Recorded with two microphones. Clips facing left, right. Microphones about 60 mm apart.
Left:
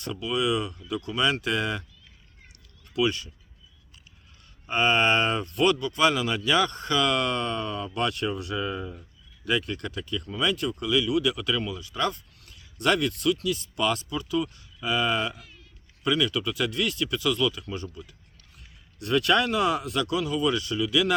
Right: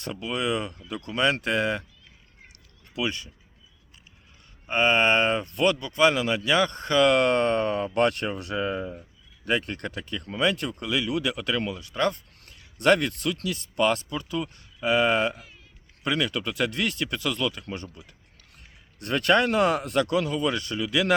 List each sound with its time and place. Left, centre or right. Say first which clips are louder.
0.0 s a man's voice: left 2 dB; right
2.9 s speech: left 4 dB; right
4.7 s a man's voice: right 1 dB; right
9.4 s a man's voice: right 1 dB; right
12.4 s a sound: right 2 dB; right
13.3 s a man's voice: left 1 dB; right
16.3 s a man's voice: even; right
18.5 s a man's voice: right 1 dB; right